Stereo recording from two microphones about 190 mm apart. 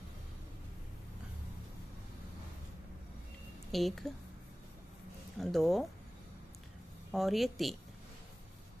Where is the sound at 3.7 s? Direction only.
Centre (ahead or behind).